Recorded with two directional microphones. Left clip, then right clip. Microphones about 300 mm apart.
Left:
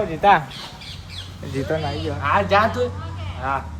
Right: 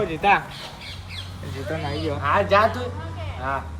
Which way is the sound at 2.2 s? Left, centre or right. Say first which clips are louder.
Left 1 dB; centre.